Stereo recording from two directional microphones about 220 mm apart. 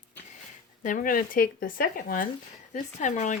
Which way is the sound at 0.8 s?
40° left (ahead or behind).